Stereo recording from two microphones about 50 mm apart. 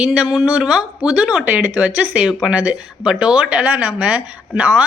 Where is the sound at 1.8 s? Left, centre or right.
Right.